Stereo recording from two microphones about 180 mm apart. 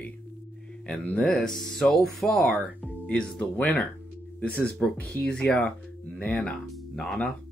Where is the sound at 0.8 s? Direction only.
5° left (ahead or behind).